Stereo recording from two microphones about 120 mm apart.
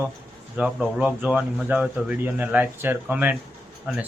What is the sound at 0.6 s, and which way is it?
Speech, 5° right (ahead or behind).